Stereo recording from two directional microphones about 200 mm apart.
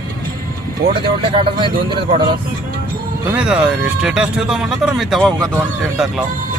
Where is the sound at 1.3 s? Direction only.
25° right (ahead or behind).